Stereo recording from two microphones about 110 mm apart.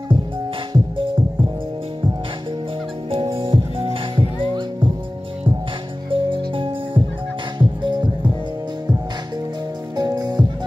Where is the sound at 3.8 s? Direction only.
45° right (ahead or behind).